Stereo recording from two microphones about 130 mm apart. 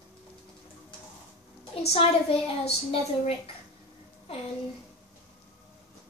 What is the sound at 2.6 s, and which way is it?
Speech, 45° left (ahead or behind).